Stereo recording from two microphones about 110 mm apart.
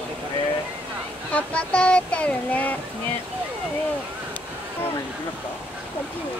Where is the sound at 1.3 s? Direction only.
10° left (ahead or behind).